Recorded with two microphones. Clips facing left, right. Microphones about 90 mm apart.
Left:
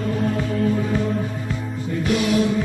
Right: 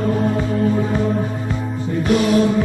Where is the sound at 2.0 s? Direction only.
40° right (ahead or behind).